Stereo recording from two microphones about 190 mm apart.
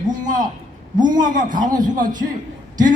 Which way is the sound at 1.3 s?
45° right (ahead or behind).